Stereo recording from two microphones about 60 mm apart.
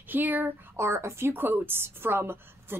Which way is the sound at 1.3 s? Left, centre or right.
Right.